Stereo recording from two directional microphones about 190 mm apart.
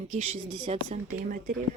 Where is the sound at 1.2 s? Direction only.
45° right (ahead or behind).